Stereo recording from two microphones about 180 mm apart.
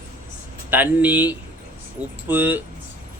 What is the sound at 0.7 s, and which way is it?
Speech, 10° right (ahead or behind).